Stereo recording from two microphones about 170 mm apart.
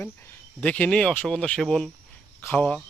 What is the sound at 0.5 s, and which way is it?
Speech, 10° left (ahead or behind).